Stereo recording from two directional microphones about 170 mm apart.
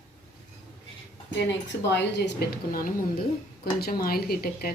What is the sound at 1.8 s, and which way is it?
A woman's voice, 90° left.